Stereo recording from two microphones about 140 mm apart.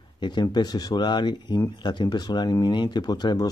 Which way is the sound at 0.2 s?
30° left (ahead or behind).